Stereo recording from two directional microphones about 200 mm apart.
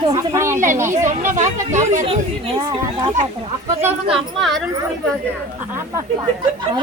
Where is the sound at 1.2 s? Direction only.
40° right (ahead or behind).